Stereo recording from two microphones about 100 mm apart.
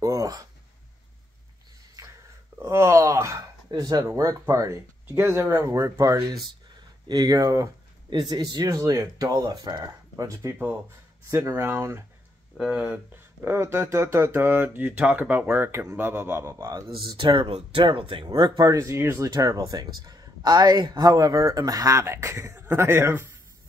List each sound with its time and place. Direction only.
0.0 s a sound: 35° right (ahead or behind)
2.0 s a sound: 35° right (ahead or behind)
2.6 s speech: 30° right (ahead or behind)
8.1 s speech: 45° right (ahead or behind)
8.6 s speech: 30° right (ahead or behind)
12.5 s speech: 5° right (ahead or behind)
13.1 s speech: 20° right (ahead or behind)
17.0 s speech: 50° right (ahead or behind)
17.5 s speech: 75° right (ahead or behind); by 23.2 s 25° right (ahead or behind)